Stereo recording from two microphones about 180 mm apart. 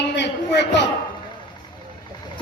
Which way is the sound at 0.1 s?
70° left (ahead or behind).